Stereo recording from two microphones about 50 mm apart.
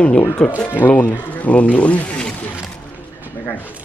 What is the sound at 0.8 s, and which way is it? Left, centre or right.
Speech, left.